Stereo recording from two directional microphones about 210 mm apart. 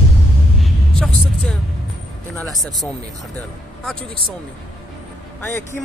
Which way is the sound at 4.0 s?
25° right (ahead or behind).